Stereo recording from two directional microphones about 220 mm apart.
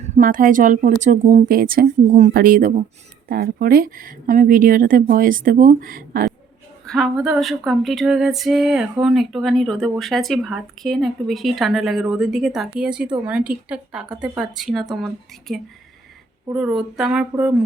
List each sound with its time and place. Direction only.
0.0 s a woman's voice: 40° right (ahead or behind)
6.8 s speech: centre (ahead or behind)